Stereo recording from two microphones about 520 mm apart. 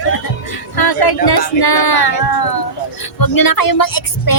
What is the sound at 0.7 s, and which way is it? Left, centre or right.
Speech, left.